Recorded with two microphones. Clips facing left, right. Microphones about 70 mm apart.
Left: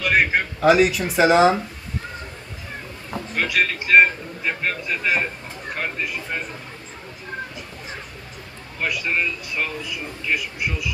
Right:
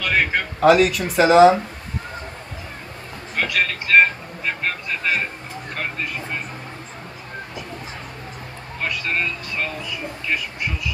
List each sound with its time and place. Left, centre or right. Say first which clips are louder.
0.0 s speech: left 1 dB; centre
0.6 s speech: right 2 dB; centre
3.3 s speech: even; centre
8.8 s speech: left 1 dB; centre